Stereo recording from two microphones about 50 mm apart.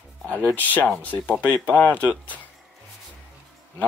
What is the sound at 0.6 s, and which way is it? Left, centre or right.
Speech, left.